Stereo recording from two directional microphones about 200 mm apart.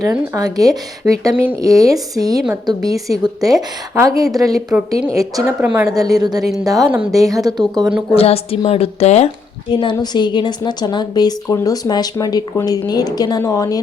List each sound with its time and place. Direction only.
0.0 s a woman's voice: 15° right (ahead or behind)
8.1 s a woman's voice: 30° left (ahead or behind)